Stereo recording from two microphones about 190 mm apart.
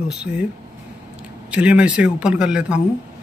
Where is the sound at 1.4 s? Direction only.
5° right (ahead or behind).